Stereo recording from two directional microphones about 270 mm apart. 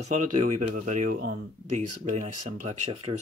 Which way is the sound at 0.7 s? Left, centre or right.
Right.